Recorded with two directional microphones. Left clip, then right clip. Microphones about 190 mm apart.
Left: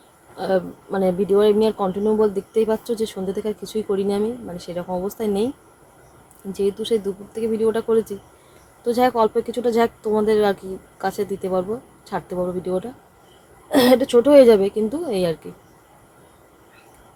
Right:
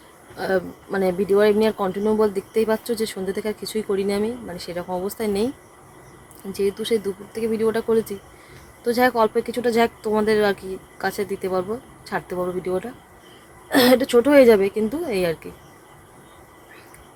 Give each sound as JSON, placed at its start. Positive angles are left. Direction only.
{"t": 0.3, "sound": "speech", "side_deg": 0}
{"t": 7.4, "sound": "speech", "side_deg": 0}